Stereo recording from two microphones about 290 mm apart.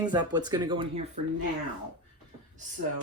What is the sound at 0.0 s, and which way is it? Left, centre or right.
Speech, centre.